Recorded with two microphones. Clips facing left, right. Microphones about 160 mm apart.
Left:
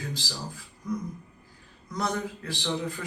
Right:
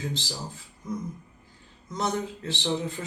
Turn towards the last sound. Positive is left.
turn(degrees=-25)  # may be behind; listen again after turning